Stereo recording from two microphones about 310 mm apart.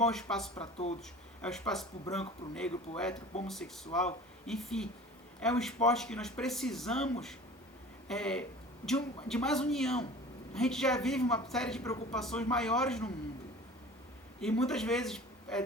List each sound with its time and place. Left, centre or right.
0.0 s speech: centre
0.5 s speech: centre
1.4 s speech: centre
14.4 s a man's voice: centre